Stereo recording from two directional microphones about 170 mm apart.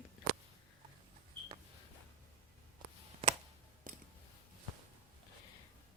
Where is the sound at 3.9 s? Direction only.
55° right (ahead or behind).